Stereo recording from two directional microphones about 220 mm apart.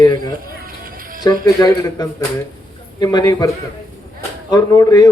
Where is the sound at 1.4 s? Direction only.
15° left (ahead or behind).